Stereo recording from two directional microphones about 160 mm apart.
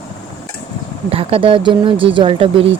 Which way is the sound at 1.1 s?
35° right (ahead or behind).